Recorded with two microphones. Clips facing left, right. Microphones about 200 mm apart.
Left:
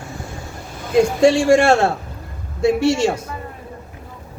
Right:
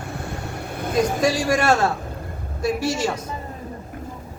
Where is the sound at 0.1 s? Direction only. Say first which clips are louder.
Right 2 dB; 65° right (ahead or behind).